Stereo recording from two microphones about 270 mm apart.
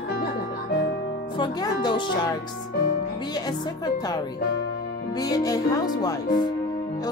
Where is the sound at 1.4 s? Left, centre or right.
Centre.